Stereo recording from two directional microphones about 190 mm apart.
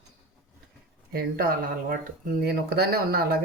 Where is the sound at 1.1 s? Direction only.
50° right (ahead or behind).